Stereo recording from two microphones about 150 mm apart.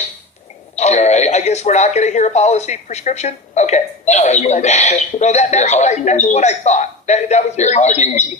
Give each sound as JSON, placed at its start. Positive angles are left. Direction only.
{"t": 0.8, "sound": "speech", "side_deg": 50}